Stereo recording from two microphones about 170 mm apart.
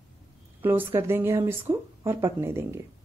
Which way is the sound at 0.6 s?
10° right (ahead or behind).